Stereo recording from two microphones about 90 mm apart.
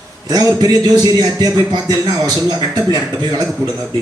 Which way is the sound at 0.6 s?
45° right (ahead or behind).